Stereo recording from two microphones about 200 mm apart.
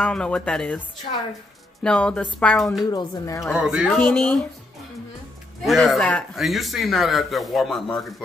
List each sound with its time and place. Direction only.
0.0 s a man's voice: 5° left (ahead or behind)
2.8 s speech: 20° left (ahead or behind)
3.5 s a man's voice: 5° right (ahead or behind)
5.6 s a man's voice: centre (ahead or behind)